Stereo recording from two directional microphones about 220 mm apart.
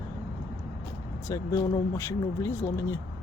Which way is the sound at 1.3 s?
15° left (ahead or behind).